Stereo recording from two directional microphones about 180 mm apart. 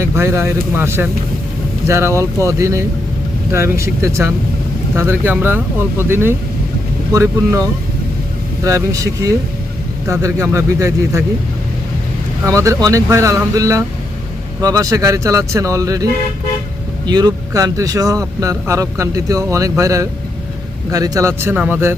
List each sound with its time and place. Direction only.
0.0 s speech: 15° right (ahead or behind)
12.5 s speech: 15° right (ahead or behind)
17.1 s speech: 20° right (ahead or behind)